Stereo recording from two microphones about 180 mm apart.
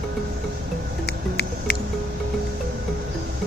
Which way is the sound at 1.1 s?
65° left (ahead or behind).